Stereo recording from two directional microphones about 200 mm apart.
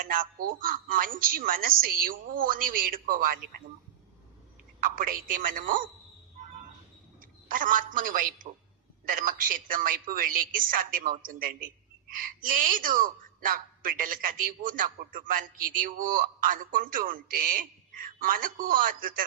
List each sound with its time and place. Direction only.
0.0 s a woman's voice: 45° right (ahead or behind)
4.8 s a woman's voice: 45° right (ahead or behind)
7.2 s a man's voice: 40° right (ahead or behind)